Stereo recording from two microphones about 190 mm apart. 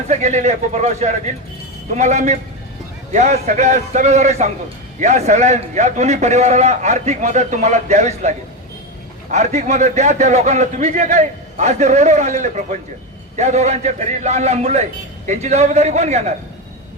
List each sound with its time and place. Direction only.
0.1 s a man's voice: 40° right (ahead or behind)